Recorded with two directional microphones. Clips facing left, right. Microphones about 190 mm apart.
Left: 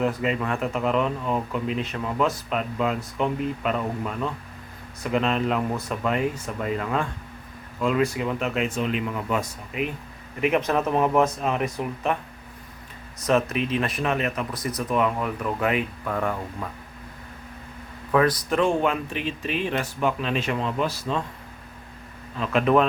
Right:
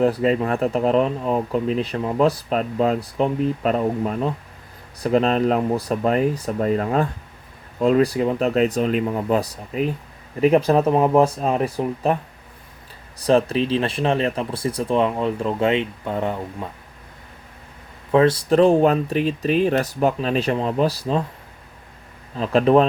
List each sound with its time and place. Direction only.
0.0 s speech: 35° right (ahead or behind)
13.1 s speech: 30° right (ahead or behind)
18.1 s speech: 25° right (ahead or behind)
22.4 s speech: 35° right (ahead or behind)